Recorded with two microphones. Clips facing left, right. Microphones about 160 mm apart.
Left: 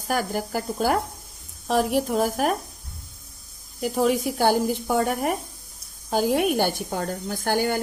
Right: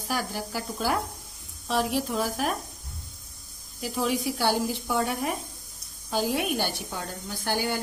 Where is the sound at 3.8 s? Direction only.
50° left (ahead or behind).